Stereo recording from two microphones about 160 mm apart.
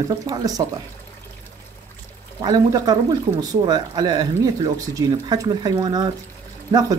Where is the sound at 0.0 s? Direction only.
25° right (ahead or behind).